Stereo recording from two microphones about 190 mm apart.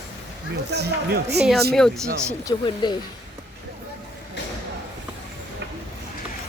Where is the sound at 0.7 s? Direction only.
60° right (ahead or behind).